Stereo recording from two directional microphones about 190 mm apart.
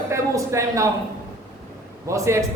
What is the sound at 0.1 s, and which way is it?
Speech, 15° right (ahead or behind).